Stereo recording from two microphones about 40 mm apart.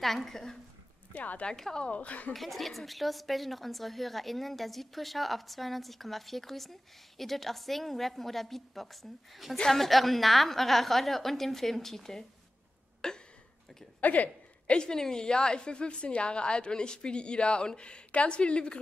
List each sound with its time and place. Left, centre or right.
0.0 s a woman's voice: centre
1.1 s speech: left
1.6 s a woman's voice: centre
1.9 s speech: left
2.3 s a woman's voice: centre
13.0 s a sound: centre
14.0 s speech: left
14.7 s a woman's voice: left